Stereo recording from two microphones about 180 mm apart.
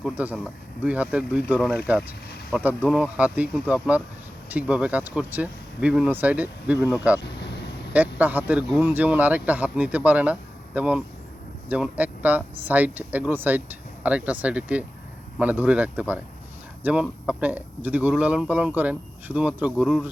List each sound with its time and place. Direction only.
0.0 s speech: 5° right (ahead or behind)
1.5 s speech: 5° left (ahead or behind)
1.9 s speech: 10° right (ahead or behind)
7.3 s vehicle: 70° left (ahead or behind)
7.9 s speech: 10° right (ahead or behind)